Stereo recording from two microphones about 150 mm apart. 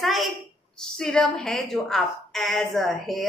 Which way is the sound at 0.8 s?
5° left (ahead or behind).